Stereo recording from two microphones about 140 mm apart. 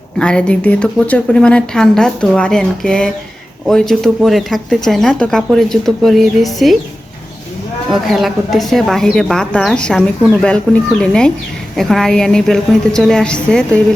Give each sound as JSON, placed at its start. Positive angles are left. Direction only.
{"t": 0.2, "sound": "speech", "side_deg": 5}
{"t": 7.9, "sound": "speech", "side_deg": 0}